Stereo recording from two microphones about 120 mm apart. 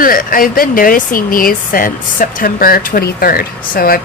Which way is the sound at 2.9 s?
90° left.